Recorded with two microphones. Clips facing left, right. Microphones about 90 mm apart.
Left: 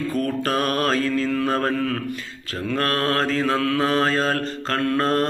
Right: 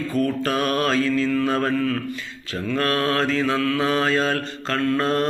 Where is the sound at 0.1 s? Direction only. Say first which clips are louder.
Right 3 dB; 45° left (ahead or behind).